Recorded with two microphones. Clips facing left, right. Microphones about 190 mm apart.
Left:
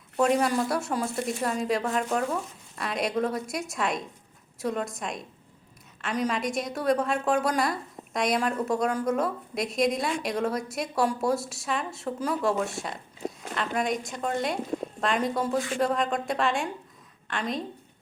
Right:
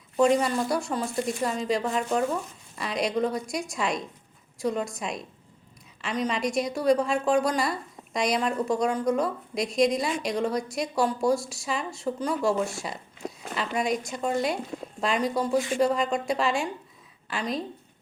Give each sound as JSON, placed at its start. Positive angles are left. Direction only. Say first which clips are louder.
{"t": 0.2, "sound": "a woman's voice", "louder": "right 1 dB", "side_deg": 0}
{"t": 15.4, "sound": "speech", "louder": "right 2 dB", "side_deg": -15}
{"t": 15.8, "sound": "a woman's voice", "louder": "right 2 dB", "side_deg": 0}